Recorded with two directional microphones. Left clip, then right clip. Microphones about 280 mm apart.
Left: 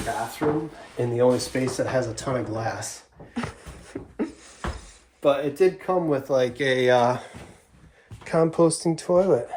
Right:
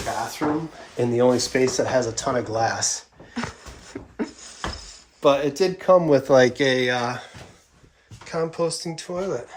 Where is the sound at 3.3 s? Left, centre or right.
Centre.